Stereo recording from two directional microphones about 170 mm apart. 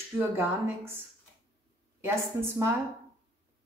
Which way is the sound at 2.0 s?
15° right (ahead or behind).